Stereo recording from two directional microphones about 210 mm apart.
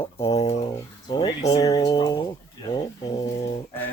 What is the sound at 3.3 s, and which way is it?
Speech, 30° left (ahead or behind).